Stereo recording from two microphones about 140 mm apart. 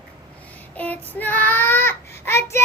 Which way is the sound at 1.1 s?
15° left (ahead or behind).